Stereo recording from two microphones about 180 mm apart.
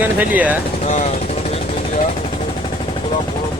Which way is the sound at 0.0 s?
10° right (ahead or behind).